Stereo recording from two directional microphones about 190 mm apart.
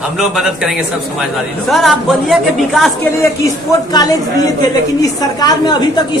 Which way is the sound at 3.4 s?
20° left (ahead or behind).